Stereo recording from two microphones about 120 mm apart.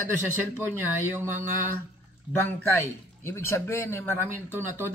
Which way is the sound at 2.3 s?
15° left (ahead or behind).